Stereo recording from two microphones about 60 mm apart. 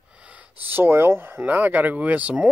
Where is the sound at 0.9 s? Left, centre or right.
Right.